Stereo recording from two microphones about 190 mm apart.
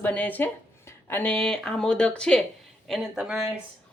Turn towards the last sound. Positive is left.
turn(degrees=-5)  # may be behind; listen again after turning